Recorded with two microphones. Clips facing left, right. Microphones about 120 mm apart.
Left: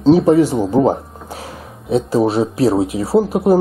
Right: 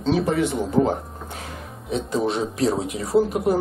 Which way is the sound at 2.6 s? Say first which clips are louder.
Left 7 dB; 30° left (ahead or behind).